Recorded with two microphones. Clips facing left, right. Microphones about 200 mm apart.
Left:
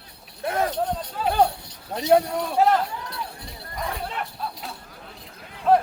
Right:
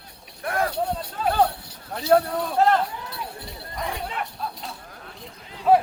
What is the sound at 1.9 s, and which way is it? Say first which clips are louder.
Speech: left 1 dB; 20° left (ahead or behind).